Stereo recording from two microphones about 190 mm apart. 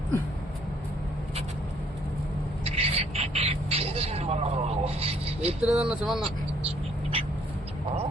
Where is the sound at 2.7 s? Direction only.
30° right (ahead or behind).